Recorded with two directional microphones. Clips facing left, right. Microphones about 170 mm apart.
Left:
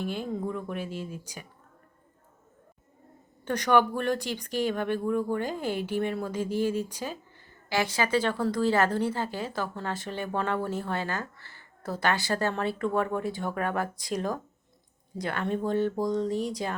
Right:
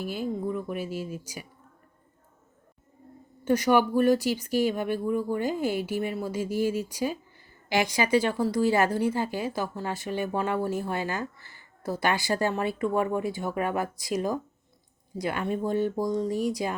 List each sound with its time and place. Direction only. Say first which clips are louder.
0.0 s speech: right 1 dB; 5° right (ahead or behind)
3.4 s a woman's voice: right 2 dB; 5° right (ahead or behind)